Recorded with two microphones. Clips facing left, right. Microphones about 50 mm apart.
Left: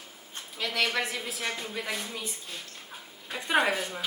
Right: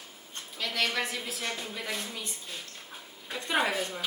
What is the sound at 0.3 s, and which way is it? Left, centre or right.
Speech, centre.